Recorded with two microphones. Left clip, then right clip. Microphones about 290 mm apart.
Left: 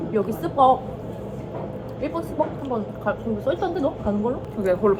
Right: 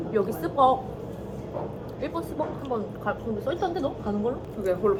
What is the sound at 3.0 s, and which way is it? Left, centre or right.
Speech, centre.